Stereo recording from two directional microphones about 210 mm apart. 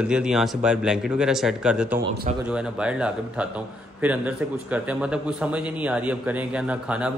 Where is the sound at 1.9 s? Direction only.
45° right (ahead or behind).